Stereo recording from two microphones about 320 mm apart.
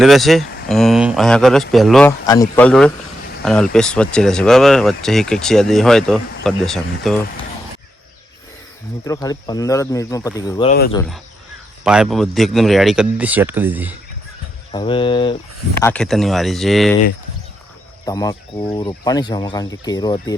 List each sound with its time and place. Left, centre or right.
0.0 s speech: centre
9.0 s speech: centre
10.7 s speech: left
10.9 s speech: centre
14.7 s speech: centre
15.8 s speech: centre
18.0 s speech: centre